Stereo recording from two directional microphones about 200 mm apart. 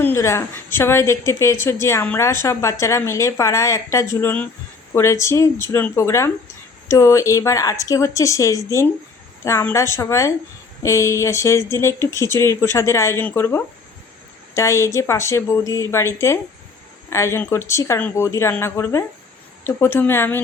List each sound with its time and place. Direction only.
0.0 s a woman's voice: 10° left (ahead or behind)